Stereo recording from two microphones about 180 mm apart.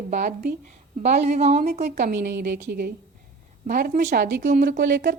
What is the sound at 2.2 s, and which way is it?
Speech, 70° right (ahead or behind).